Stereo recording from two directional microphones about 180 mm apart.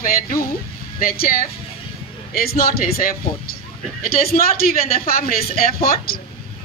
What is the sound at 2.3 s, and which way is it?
Speech, 55° left (ahead or behind).